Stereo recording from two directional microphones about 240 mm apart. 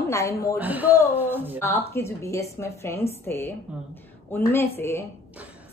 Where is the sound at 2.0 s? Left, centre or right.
Centre.